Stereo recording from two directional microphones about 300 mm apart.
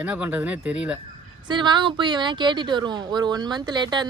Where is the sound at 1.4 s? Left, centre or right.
Centre.